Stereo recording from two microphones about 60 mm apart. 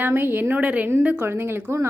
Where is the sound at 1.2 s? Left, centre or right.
Right.